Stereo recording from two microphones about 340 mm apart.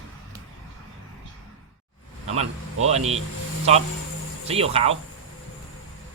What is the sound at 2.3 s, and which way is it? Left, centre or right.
Speech, centre.